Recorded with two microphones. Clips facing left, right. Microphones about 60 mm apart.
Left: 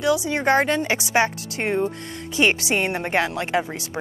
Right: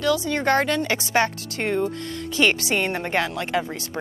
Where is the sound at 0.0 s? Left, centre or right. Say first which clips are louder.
Left 1 dB; centre.